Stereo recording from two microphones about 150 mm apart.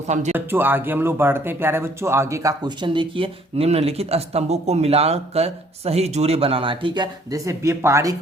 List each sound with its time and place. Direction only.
0.1 s speech: 50° right (ahead or behind)
0.3 s speech: 15° right (ahead or behind)